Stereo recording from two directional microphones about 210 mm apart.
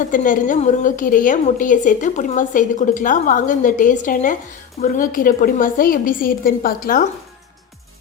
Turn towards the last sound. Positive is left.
turn(degrees=45)  # may be behind; listen again after turning